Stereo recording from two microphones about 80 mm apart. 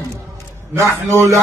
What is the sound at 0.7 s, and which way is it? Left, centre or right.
Speech, right.